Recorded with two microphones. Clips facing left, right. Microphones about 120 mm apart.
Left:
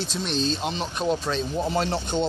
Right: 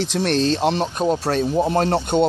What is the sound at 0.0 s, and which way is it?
Speech, 80° right.